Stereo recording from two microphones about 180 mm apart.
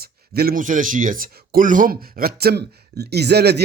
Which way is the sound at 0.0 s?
60° right (ahead or behind).